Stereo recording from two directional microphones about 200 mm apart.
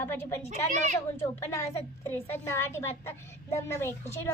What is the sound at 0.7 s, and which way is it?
Speech, 35° right (ahead or behind).